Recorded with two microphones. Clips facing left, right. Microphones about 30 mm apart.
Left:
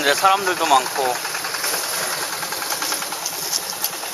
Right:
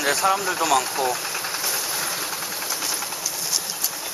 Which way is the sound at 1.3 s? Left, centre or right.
Left.